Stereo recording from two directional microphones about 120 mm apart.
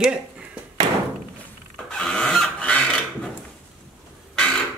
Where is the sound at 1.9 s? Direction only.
5° left (ahead or behind).